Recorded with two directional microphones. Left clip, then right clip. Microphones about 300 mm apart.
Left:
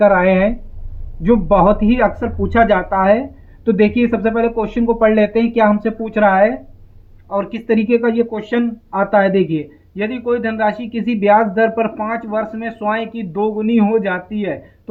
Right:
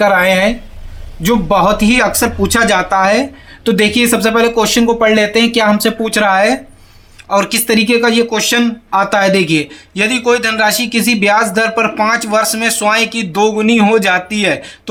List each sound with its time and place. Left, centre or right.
0.0 s speech: centre